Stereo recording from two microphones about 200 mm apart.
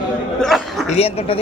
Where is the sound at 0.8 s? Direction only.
30° left (ahead or behind).